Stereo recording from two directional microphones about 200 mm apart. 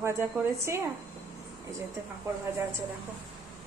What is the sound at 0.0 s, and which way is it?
Speech, 15° right (ahead or behind).